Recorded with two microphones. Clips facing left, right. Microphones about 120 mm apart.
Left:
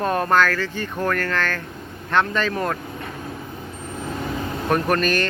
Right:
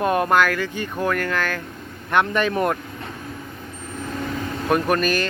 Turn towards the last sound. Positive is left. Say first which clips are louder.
# even
turn(degrees=-5)  # may be behind; listen again after turning